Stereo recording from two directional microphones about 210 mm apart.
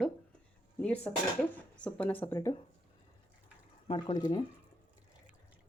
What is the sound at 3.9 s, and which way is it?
Speech, 20° left (ahead or behind).